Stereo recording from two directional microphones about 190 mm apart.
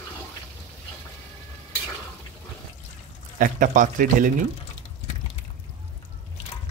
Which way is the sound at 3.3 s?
45° right (ahead or behind).